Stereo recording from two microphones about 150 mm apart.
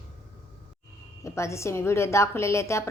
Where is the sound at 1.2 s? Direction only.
20° left (ahead or behind).